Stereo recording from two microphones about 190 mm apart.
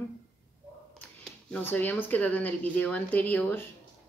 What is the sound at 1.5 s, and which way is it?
Speech, 10° left (ahead or behind).